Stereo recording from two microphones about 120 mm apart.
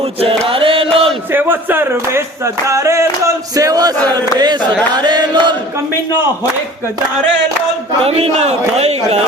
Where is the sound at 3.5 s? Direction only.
30° right (ahead or behind).